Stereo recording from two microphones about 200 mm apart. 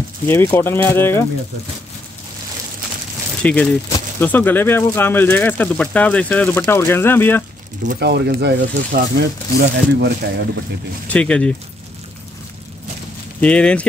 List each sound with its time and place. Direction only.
0.3 s speech: 15° left (ahead or behind)
3.4 s speech: 5° left (ahead or behind)
7.9 s speech: 55° right (ahead or behind)
11.1 s speech: 5° left (ahead or behind)
13.4 s speech: 5° left (ahead or behind)